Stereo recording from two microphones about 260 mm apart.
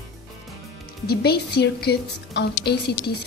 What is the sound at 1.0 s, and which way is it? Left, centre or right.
A woman's voice, left.